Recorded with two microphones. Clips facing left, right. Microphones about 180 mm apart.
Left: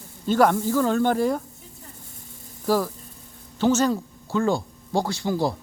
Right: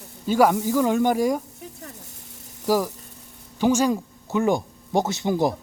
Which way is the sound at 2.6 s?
10° right (ahead or behind).